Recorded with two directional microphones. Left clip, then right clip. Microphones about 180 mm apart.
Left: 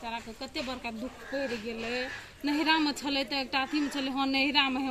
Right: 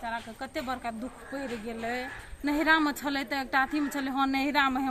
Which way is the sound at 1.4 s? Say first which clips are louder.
Left 3 dB; 45° right (ahead or behind).